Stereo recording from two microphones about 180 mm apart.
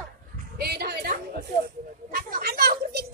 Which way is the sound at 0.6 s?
60° right (ahead or behind).